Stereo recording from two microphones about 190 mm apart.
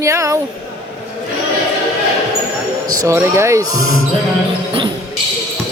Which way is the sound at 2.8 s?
15° right (ahead or behind).